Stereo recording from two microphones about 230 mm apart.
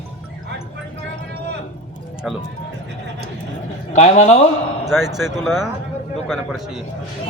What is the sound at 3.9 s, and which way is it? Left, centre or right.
Speech, left.